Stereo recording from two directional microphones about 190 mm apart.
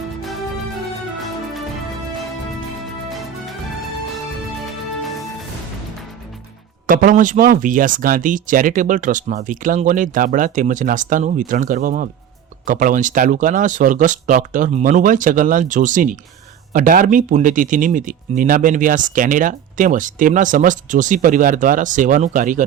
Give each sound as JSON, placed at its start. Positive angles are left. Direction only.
{"t": 3.1, "sound": "music", "side_deg": 0}
{"t": 6.8, "sound": "speech", "side_deg": -45}